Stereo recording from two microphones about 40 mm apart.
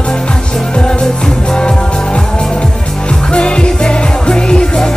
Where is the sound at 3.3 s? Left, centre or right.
Left.